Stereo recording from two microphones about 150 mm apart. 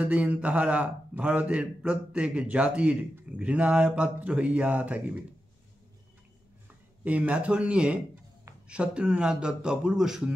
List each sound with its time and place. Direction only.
0.0 s a man's voice: 10° right (ahead or behind)
7.1 s a man's voice: 10° right (ahead or behind)